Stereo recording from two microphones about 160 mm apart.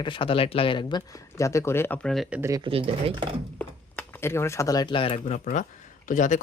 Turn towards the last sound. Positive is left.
turn(degrees=50)  # may be behind; listen again after turning